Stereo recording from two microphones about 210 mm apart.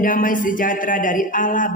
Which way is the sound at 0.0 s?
40° left (ahead or behind).